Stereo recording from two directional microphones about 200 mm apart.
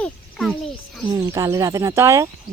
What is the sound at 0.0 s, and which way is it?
A child's voice, centre (ahead or behind).